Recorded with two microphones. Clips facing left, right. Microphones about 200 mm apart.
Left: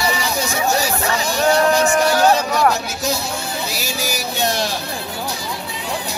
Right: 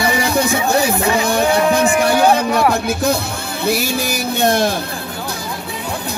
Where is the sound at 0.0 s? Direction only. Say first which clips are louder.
Right 5 dB; 55° right (ahead or behind).